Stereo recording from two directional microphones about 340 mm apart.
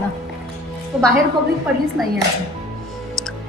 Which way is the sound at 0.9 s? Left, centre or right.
Centre.